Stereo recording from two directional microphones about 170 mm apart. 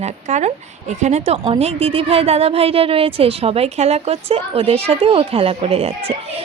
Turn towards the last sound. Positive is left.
turn(degrees=-35)  # may be behind; listen again after turning